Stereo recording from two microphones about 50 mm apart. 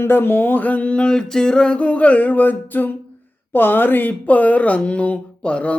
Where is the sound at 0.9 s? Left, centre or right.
Centre.